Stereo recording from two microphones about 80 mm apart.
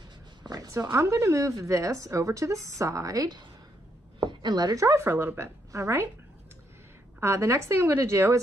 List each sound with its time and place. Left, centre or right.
0.5 s a woman's voice: right
4.2 s speech: right
4.8 s a woman's voice: right
7.2 s a woman's voice: right